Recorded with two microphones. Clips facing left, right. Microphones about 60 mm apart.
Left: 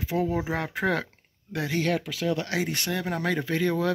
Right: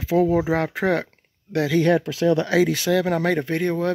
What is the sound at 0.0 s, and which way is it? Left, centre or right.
Speech, right.